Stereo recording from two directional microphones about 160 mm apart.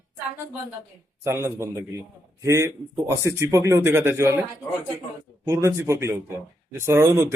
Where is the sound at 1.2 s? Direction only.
15° right (ahead or behind).